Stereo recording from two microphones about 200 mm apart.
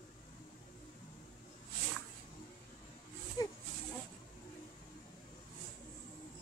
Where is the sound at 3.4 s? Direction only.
20° left (ahead or behind).